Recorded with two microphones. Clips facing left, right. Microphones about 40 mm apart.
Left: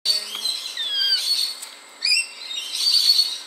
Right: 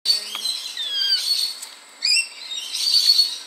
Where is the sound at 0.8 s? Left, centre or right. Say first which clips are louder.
Left 1 dB; centre.